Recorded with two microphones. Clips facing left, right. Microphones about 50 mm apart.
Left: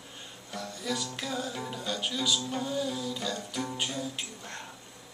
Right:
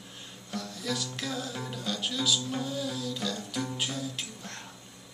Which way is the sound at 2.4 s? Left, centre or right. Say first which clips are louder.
Left 1 dB; centre.